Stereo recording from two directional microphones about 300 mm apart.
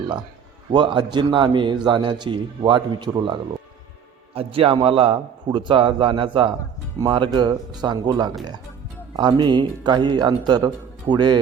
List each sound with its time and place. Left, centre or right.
0.7 s a man's voice: centre
4.4 s a man's voice: centre